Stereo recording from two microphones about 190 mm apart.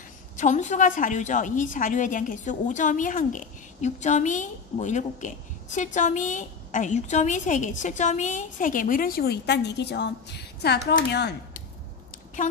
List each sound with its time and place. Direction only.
0.4 s a woman's voice: 40° left (ahead or behind); by 11.3 s 60° left (ahead or behind)
12.4 s speech: 40° left (ahead or behind)